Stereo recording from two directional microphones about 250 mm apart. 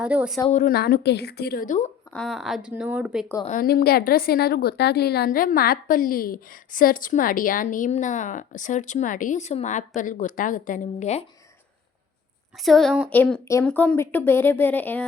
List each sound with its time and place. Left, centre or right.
0.0 s speech: centre
0.5 s a woman's voice: left
2.1 s speech: centre
3.4 s a woman's voice: left
12.6 s a woman's voice: centre